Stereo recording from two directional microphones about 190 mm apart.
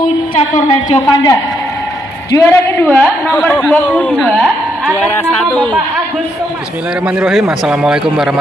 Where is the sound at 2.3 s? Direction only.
10° left (ahead or behind).